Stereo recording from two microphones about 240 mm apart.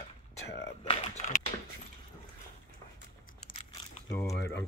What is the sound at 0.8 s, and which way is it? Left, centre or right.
Typing, left.